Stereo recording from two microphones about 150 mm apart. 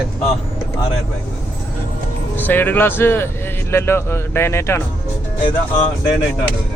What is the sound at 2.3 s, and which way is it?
Speech, 15° left (ahead or behind).